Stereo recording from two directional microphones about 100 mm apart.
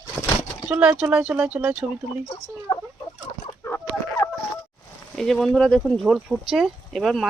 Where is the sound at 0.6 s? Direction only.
10° right (ahead or behind).